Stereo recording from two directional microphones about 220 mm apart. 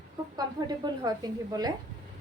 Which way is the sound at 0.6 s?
20° right (ahead or behind).